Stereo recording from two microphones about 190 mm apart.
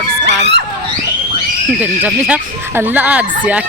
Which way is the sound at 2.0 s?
10° right (ahead or behind).